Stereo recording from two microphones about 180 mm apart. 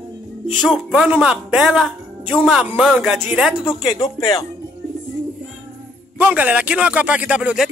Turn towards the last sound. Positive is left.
turn(degrees=-5)  # may be behind; listen again after turning